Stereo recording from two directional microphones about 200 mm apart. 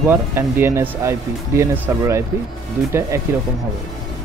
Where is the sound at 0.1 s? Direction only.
10° right (ahead or behind).